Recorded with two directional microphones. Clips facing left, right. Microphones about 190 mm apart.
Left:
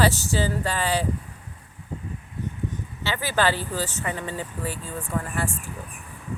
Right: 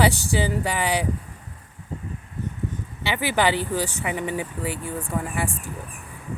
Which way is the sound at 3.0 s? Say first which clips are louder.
Right 2 dB; 15° right (ahead or behind).